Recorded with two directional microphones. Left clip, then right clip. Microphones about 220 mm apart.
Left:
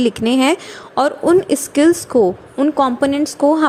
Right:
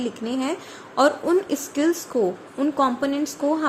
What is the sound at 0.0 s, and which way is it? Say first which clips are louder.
A woman's voice: left 12 dB; 40° left (ahead or behind).